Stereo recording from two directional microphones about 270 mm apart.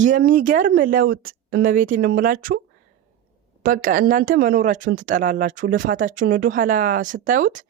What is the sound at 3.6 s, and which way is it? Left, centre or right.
Speech, right.